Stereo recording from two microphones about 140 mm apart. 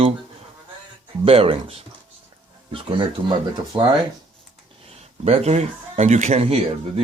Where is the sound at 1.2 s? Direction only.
40° right (ahead or behind).